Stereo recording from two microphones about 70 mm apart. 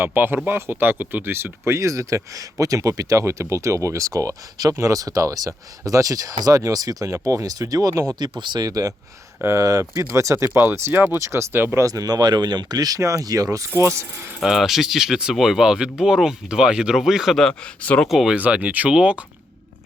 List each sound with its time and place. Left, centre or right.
0.0 s speech: right
8.2 s speech: right
11.2 s speech: right
11.8 s speech: right
13.0 s speech: right
14.4 s speech: centre
17.5 s speech: left
18.1 s speech: centre
18.3 s speech: right